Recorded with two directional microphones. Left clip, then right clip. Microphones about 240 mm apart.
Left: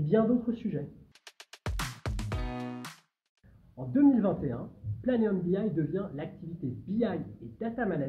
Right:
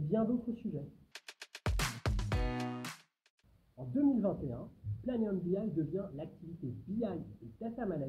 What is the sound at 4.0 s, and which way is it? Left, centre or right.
Speech, centre.